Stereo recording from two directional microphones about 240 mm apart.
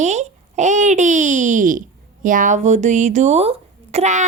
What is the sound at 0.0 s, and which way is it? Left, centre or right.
Babbling, right.